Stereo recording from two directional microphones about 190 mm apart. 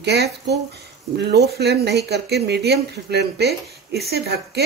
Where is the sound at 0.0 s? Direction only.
60° right (ahead or behind).